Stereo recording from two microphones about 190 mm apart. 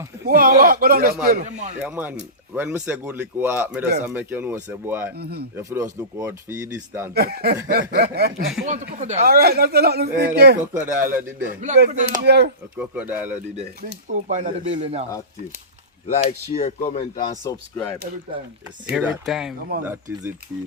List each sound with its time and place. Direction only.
0.3 s a man's voice: 50° right (ahead or behind)
1.8 s speech: 5° right (ahead or behind)
5.1 s speech: 55° right (ahead or behind)
5.5 s speech: 15° right (ahead or behind)
7.1 s speech: 55° right (ahead or behind)
8.6 s speech: 40° right (ahead or behind); by 10.6 s 60° right (ahead or behind)
10.8 s speech: 10° right (ahead or behind)
11.4 s speech: 40° right (ahead or behind)
12.2 s speech: 60° right (ahead or behind)
12.7 s speech: 10° right (ahead or behind)
14.1 s speech: 40° right (ahead or behind)
16.0 s speech: 35° left (ahead or behind)
17.5 s speech: 15° left (ahead or behind)
18.9 s speech: centre (ahead or behind)